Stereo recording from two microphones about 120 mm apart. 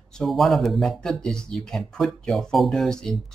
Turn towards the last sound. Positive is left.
turn(degrees=5)  # may be behind; listen again after turning